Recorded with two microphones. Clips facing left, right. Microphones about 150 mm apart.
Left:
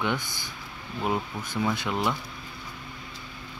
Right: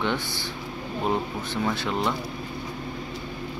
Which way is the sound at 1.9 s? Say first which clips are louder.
Right 1 dB; 20° right (ahead or behind).